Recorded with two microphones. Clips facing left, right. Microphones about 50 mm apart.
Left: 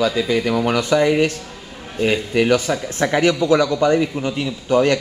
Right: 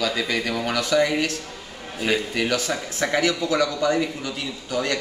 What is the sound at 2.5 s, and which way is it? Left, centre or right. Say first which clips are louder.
A man's voice: left 7 dB; left.